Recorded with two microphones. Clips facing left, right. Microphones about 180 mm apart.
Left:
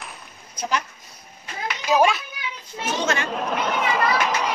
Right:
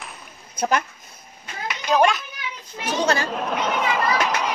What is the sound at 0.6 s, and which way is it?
Speech, 50° right (ahead or behind).